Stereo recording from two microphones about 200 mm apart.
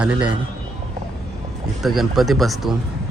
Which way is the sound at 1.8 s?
Centre (ahead or behind).